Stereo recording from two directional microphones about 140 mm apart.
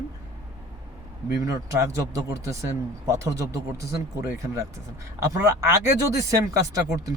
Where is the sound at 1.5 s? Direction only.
20° right (ahead or behind).